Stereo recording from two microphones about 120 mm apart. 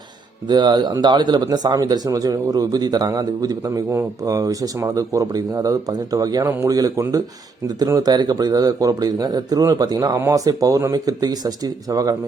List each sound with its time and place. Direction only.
0.4 s speech: 35° right (ahead or behind)